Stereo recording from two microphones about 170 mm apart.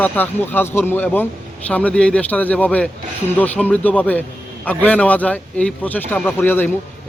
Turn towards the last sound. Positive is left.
turn(degrees=10)  # may be behind; listen again after turning